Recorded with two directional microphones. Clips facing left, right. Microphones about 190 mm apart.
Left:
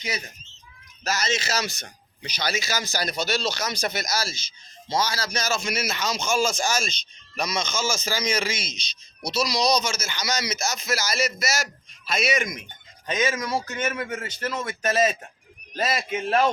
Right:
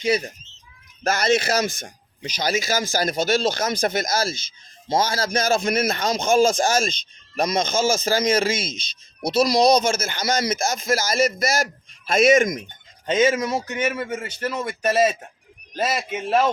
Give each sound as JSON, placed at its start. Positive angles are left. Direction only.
{"t": 0.0, "sound": "speech", "side_deg": -30}
{"t": 1.0, "sound": "speech", "side_deg": -55}
{"t": 13.1, "sound": "speech", "side_deg": -25}